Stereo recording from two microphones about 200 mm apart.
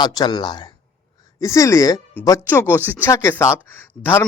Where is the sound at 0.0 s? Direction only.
20° left (ahead or behind).